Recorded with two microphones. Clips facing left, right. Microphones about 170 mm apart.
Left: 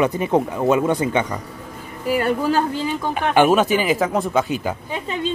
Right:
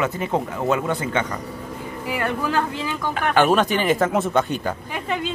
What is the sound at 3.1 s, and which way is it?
Speech, 15° left (ahead or behind).